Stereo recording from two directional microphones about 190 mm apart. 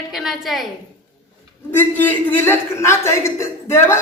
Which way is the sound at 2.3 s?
10° left (ahead or behind).